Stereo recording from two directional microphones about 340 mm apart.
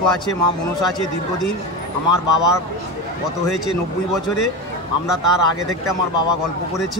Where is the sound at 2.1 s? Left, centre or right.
Left.